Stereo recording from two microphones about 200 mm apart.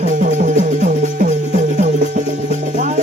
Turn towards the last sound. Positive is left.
turn(degrees=-40)  # may be behind; listen again after turning